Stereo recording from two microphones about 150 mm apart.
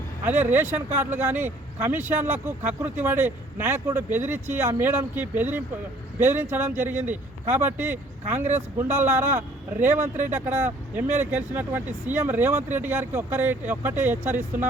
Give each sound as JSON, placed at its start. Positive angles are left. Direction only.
{"t": 0.3, "sound": "speech", "side_deg": -15}